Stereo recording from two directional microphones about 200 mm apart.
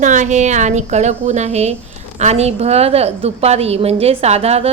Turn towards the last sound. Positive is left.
turn(degrees=-30)  # may be behind; listen again after turning